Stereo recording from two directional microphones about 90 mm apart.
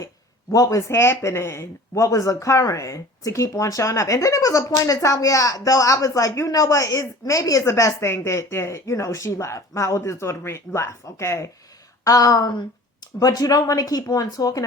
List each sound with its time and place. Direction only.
0.5 s speech: 40° left (ahead or behind)